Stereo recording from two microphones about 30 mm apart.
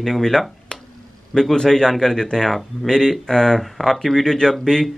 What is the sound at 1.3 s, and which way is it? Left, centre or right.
A man's voice, centre.